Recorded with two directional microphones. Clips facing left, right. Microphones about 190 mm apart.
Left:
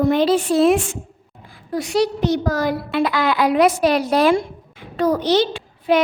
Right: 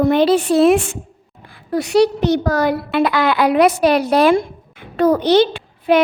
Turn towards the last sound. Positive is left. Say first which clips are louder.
# right 3 dB
turn(degrees=-60)  # may be behind; listen again after turning